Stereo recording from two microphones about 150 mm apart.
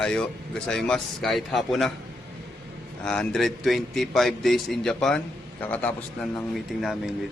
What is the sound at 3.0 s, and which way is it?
A man's voice, 5° left (ahead or behind).